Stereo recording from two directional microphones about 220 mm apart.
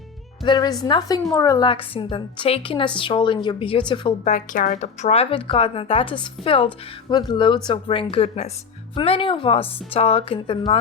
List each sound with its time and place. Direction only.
0.4 s a woman's voice: 20° left (ahead or behind)
4.3 s a woman's voice: 35° left (ahead or behind)